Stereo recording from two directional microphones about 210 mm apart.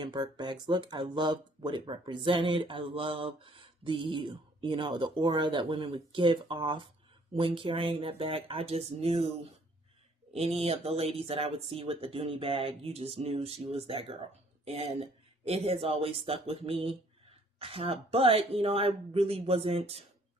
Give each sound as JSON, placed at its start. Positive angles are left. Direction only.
{"t": 0.0, "sound": "speech", "side_deg": -20}
{"t": 10.3, "sound": "speech", "side_deg": -30}